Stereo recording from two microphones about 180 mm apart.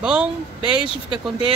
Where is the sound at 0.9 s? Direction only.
30° left (ahead or behind).